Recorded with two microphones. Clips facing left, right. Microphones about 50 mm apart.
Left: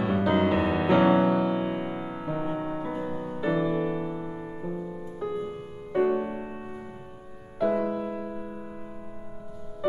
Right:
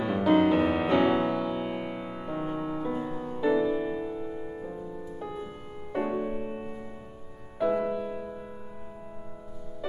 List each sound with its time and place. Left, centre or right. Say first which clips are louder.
0.0 s music: right 1 dB; centre
3.8 s music: left 2 dB; left
5.2 s music: left 8 dB; centre
6.1 s music: left 1 dB; centre
7.6 s music: left 1 dB; centre